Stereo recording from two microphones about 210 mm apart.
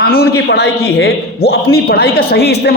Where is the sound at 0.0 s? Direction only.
45° left (ahead or behind).